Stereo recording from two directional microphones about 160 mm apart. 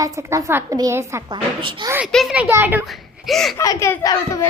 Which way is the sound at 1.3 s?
30° right (ahead or behind).